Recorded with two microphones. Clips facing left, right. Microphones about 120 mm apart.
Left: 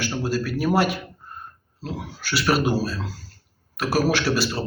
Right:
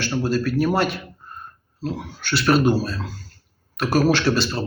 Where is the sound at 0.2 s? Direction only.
10° left (ahead or behind).